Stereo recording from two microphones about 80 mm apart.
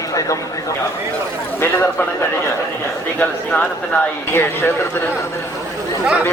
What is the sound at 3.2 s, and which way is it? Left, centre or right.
A man's voice, centre.